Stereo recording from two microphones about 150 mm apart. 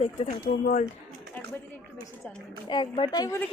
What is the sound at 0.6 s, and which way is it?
Speech, 60° left (ahead or behind).